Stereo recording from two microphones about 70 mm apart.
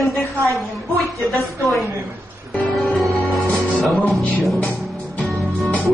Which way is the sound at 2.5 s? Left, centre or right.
Centre.